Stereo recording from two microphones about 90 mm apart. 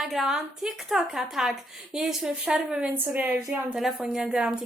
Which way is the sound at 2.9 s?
20° right (ahead or behind).